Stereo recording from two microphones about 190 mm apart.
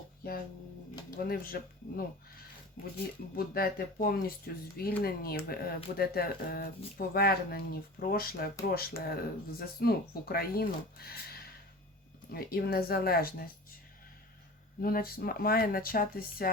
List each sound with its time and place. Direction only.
1.1 s speech: 50° left (ahead or behind)
3.3 s speech: 50° left (ahead or behind)
14.8 s speech: 50° left (ahead or behind)